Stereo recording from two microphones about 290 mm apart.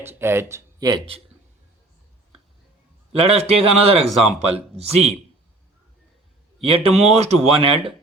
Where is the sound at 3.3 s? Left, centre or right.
Right.